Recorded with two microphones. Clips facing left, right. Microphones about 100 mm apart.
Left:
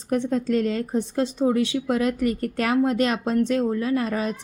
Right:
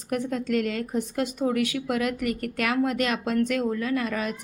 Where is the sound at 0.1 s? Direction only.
35° left (ahead or behind).